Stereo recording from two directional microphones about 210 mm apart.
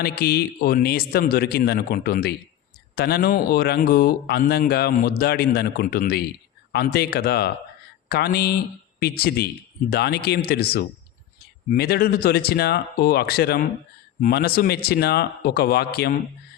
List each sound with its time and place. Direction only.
0.0 s speech: 50° left (ahead or behind)